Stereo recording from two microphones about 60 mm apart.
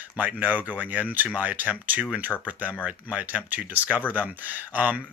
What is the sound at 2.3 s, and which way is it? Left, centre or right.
Speech, left.